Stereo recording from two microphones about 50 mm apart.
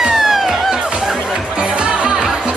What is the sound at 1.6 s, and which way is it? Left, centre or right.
Music, right.